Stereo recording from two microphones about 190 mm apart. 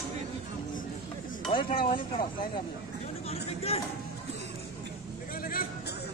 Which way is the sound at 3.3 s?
30° left (ahead or behind).